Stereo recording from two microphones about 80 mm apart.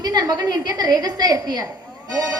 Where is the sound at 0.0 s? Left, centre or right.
Right.